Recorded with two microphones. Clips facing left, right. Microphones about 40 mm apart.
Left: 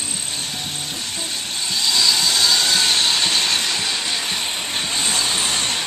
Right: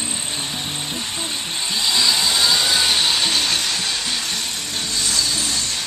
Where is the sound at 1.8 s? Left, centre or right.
Centre.